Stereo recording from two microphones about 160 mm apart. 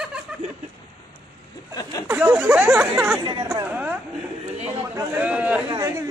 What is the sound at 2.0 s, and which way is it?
A man's voice, 10° right (ahead or behind).